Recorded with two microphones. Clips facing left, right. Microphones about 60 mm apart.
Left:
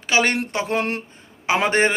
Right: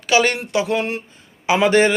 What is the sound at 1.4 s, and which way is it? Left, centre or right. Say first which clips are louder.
Speech: right 4 dB; left.